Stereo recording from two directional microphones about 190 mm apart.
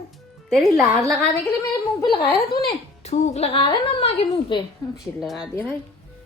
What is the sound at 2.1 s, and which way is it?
A woman's voice, 30° left (ahead or behind).